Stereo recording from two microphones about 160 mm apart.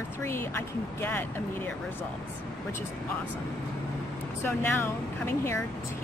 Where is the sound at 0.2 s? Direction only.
15° left (ahead or behind).